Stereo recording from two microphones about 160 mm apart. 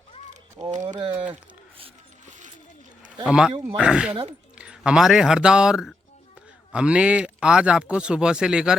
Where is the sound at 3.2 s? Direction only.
5° right (ahead or behind).